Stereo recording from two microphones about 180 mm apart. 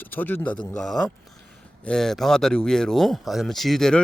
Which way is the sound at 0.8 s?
Centre (ahead or behind).